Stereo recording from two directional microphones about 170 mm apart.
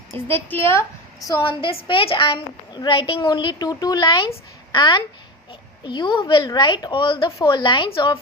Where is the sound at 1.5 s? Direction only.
30° left (ahead or behind).